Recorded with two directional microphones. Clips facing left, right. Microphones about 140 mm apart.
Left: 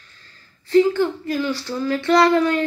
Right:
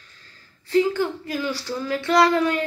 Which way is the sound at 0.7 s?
10° right (ahead or behind).